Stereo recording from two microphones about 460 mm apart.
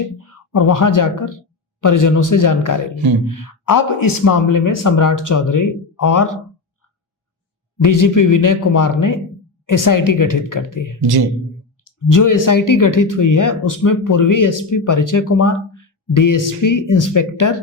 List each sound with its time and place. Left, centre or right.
0.2 s speech: left
7.8 s speech: left
11.0 s speech: right
11.9 s speech: left